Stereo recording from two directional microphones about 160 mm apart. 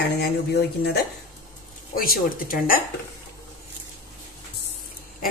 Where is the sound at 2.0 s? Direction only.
65° left (ahead or behind).